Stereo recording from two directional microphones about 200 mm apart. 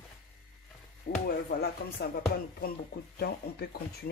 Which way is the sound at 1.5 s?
50° left (ahead or behind).